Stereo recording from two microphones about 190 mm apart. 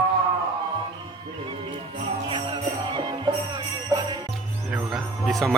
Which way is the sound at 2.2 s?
25° right (ahead or behind).